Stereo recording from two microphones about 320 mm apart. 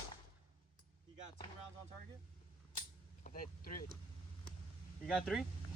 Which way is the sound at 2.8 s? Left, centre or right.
Left.